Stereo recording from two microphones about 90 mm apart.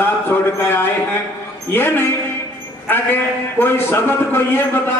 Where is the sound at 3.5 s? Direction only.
25° left (ahead or behind).